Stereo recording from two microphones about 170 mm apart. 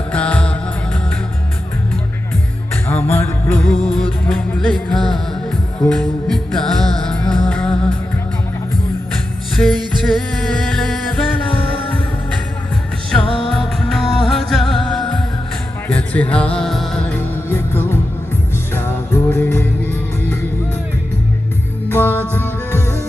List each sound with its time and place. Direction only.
0.1 s music: 10° left (ahead or behind)
2.9 s music: 15° left (ahead or behind)
9.6 s music: centre (ahead or behind)
13.5 s music: centre (ahead or behind)
21.9 s music: 10° left (ahead or behind)